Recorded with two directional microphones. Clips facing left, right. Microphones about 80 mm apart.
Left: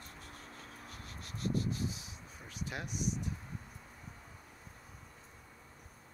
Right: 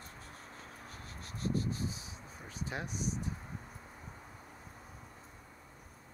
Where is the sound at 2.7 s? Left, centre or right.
Right.